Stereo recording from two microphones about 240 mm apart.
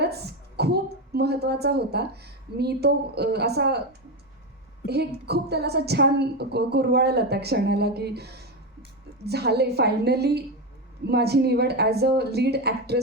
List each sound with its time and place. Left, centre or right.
0.0 s a woman's voice: right
4.9 s a woman's voice: right